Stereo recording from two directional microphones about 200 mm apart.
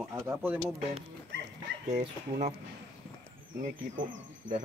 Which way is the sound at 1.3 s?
70° right (ahead or behind).